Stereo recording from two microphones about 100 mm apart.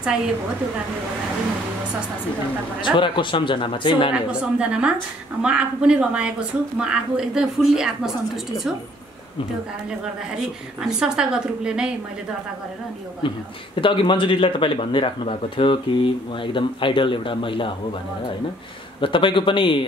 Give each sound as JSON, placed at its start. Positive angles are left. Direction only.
{"t": 2.8, "sound": "speech", "side_deg": 55}
{"t": 4.1, "sound": "a woman's voice", "side_deg": -10}
{"t": 10.8, "sound": "a woman's voice", "side_deg": -5}
{"t": 13.2, "sound": "speech", "side_deg": 55}
{"t": 18.9, "sound": "speech", "side_deg": 55}